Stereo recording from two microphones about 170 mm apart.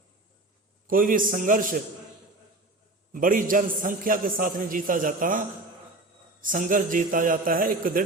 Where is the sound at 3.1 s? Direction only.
55° right (ahead or behind).